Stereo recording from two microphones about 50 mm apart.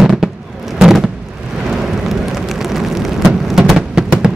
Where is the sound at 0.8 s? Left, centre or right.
Centre.